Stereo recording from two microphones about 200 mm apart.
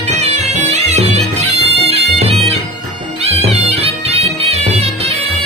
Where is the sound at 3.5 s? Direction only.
30° right (ahead or behind).